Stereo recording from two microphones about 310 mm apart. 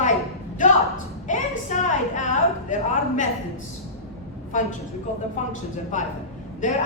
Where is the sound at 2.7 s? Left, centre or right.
Left.